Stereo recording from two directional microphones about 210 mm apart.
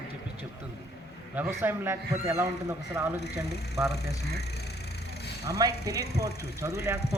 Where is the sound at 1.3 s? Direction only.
10° right (ahead or behind).